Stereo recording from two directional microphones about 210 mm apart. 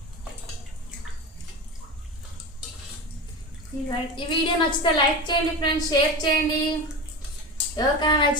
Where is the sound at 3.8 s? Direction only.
25° left (ahead or behind).